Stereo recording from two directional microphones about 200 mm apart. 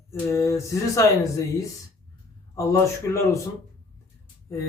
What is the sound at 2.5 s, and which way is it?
Speech, 15° left (ahead or behind).